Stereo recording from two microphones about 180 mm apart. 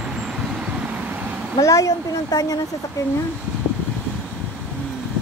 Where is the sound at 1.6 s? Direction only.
20° left (ahead or behind).